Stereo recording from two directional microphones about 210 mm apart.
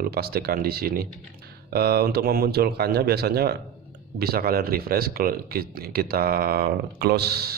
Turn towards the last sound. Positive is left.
turn(degrees=-50)  # may be behind; listen again after turning